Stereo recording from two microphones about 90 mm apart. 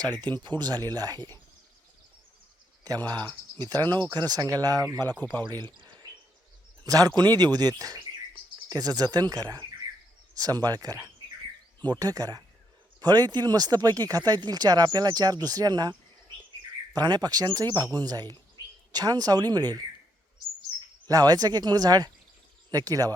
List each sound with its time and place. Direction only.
0.1 s speech: 20° left (ahead or behind)
0.6 s speech: 50° right (ahead or behind)
3.6 s speech: 50° right (ahead or behind)
5.0 s speech: 20° left (ahead or behind)
5.3 s a man's voice: 50° right (ahead or behind)
21.1 s speech: 45° right (ahead or behind)